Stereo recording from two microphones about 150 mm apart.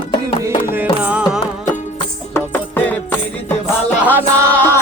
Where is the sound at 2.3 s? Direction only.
10° left (ahead or behind).